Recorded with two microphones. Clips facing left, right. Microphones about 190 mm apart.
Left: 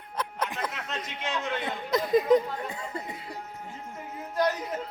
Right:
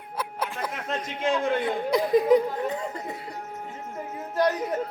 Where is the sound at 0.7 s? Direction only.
50° right (ahead or behind).